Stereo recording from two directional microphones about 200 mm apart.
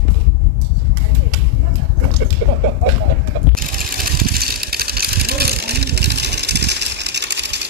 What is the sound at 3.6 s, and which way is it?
Vehicle, 45° right (ahead or behind).